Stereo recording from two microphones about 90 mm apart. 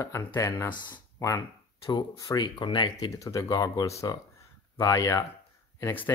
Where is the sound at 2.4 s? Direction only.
60° left (ahead or behind).